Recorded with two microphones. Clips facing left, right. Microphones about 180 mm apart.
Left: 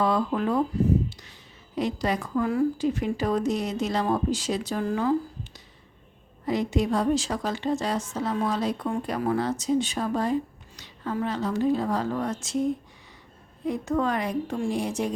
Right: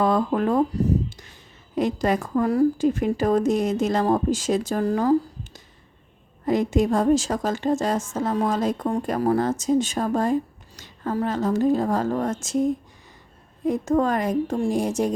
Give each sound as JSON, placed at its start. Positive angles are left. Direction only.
{"t": 0.0, "sound": "a woman's voice", "side_deg": -50}
{"t": 13.7, "sound": "a woman's voice", "side_deg": -45}